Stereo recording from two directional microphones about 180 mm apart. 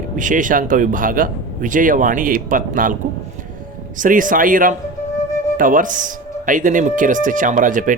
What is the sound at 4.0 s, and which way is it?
Speech, 50° right (ahead or behind).